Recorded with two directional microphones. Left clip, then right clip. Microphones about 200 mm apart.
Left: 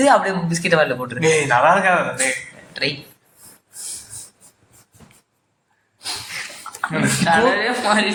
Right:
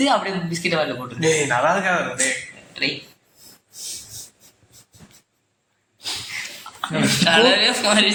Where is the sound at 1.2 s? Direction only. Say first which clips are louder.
Left 3 dB; centre (ahead or behind).